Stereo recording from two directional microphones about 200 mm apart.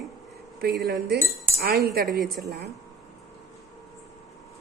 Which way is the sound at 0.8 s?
55° right (ahead or behind).